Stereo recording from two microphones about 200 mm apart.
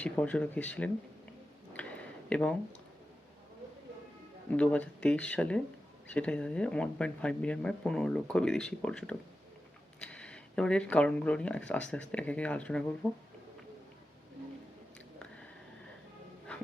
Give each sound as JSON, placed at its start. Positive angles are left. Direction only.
{"t": 0.0, "sound": "speech", "side_deg": 5}
{"t": 1.7, "sound": "a sound", "side_deg": 5}
{"t": 4.5, "sound": "speech", "side_deg": 5}